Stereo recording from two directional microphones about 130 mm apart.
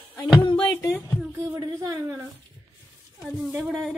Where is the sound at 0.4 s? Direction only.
40° left (ahead or behind).